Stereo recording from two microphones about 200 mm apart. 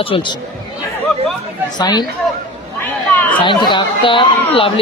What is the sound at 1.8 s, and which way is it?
Speech, 20° left (ahead or behind).